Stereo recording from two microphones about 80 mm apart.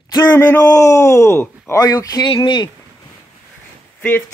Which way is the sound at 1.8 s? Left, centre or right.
Left.